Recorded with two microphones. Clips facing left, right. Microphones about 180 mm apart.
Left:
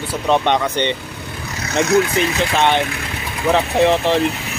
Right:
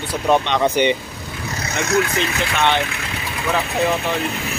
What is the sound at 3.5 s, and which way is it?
Speech, 25° left (ahead or behind).